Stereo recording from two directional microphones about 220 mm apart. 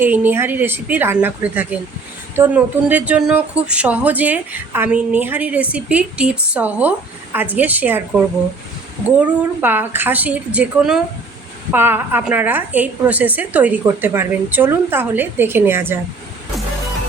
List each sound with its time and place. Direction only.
0.0 s speech: 10° right (ahead or behind)
9.1 s speech: 10° right (ahead or behind)